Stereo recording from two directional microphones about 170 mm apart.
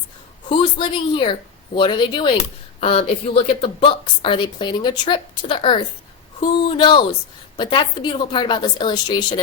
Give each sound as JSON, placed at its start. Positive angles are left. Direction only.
{"t": 0.5, "sound": "a woman's voice", "side_deg": 30}